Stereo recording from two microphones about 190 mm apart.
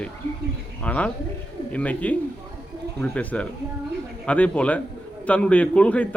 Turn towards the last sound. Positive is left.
turn(degrees=5)  # may be behind; listen again after turning